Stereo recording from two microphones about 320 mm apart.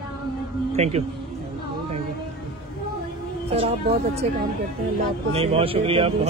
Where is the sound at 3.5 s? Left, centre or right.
Centre.